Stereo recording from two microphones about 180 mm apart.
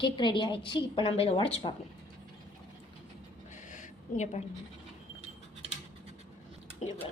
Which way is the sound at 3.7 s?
40° left (ahead or behind).